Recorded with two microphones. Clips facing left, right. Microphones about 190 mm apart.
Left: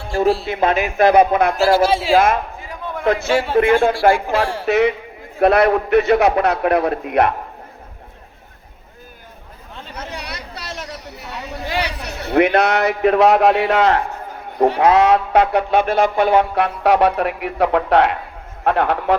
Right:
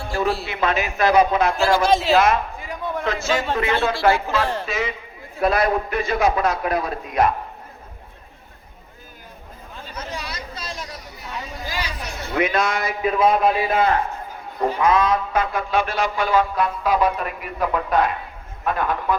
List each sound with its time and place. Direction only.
0.4 s a man's voice: 50° left (ahead or behind)
1.5 s speech: 40° left (ahead or behind)
1.8 s speech: 10° left (ahead or behind)
2.1 s a man's voice: 50° left (ahead or behind)
3.3 s speech: 10° left (ahead or behind)
3.8 s a man's voice: 50° left (ahead or behind)
4.4 s speech: 10° left (ahead or behind)
4.6 s a man's voice: 65° left (ahead or behind)
9.9 s chatter: 65° left (ahead or behind); by 14.0 s 85° left
14.6 s speech: 75° left (ahead or behind)